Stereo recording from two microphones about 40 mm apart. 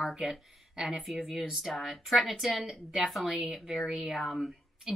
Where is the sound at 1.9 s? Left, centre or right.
Centre.